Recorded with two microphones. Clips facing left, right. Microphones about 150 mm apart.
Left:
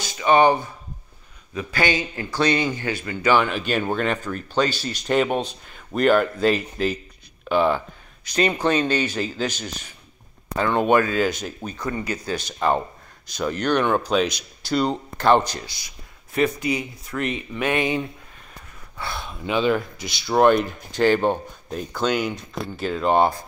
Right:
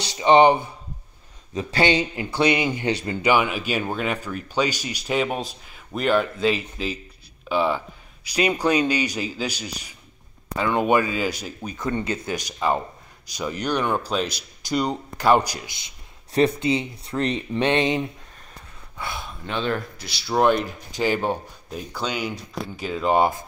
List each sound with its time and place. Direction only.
0.2 s a man's voice: 20° right (ahead or behind)
11.8 s a man's voice: 25° right (ahead or behind)
12.4 s a man's voice: 5° right (ahead or behind)
19.4 s speech: 5° left (ahead or behind)